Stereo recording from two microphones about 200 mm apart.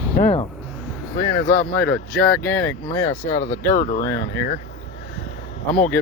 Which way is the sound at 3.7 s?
40° left (ahead or behind).